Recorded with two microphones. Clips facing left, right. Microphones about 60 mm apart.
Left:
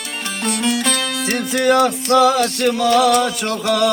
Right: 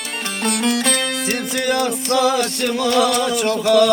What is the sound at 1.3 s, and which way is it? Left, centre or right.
Music, centre.